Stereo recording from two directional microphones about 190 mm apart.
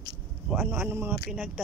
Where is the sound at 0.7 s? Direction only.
10° right (ahead or behind).